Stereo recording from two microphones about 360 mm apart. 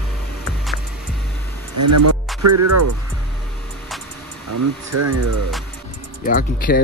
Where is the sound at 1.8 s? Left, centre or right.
Right.